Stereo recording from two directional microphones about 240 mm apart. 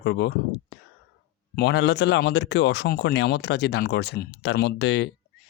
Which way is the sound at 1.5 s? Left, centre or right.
Left.